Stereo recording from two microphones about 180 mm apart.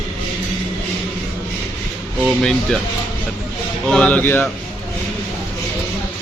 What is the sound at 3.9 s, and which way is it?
Speech, 5° left (ahead or behind).